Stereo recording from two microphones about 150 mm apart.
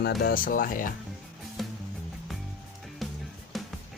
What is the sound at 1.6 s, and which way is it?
Music, centre (ahead or behind).